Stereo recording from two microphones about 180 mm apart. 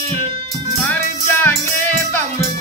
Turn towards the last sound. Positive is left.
turn(degrees=10)  # may be behind; listen again after turning